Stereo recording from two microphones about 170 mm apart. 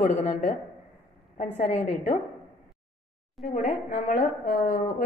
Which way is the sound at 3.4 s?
Centre (ahead or behind).